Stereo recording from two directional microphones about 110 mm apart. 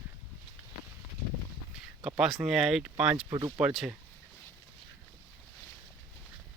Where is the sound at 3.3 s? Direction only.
40° right (ahead or behind).